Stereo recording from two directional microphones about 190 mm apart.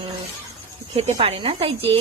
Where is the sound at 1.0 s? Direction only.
35° right (ahead or behind).